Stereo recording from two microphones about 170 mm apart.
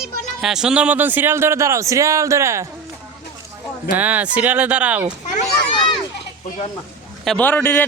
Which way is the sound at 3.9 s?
10° right (ahead or behind).